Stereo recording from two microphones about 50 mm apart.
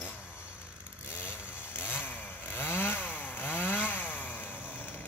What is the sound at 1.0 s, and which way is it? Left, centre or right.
Chainsaw, left.